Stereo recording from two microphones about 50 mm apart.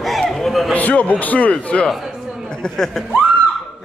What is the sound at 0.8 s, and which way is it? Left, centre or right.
A man's voice, left.